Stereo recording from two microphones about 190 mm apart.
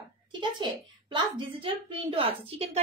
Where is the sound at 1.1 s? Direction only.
25° right (ahead or behind).